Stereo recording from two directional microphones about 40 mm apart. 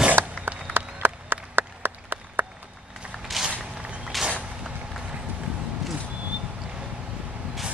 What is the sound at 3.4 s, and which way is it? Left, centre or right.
Walk, centre.